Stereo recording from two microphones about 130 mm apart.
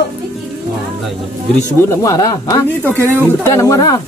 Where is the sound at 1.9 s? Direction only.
25° left (ahead or behind).